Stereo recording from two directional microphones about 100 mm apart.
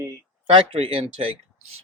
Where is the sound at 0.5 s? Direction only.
65° right (ahead or behind).